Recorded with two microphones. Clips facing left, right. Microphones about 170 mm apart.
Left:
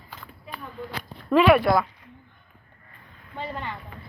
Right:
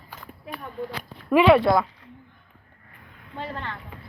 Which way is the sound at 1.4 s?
25° right (ahead or behind).